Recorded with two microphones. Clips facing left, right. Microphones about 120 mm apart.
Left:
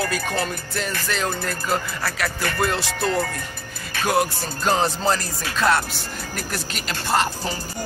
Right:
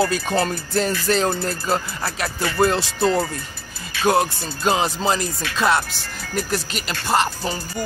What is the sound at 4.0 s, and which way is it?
Music, 50° left (ahead or behind).